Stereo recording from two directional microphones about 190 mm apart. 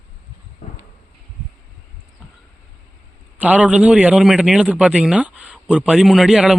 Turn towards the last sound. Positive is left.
turn(degrees=0)  # may be behind; listen again after turning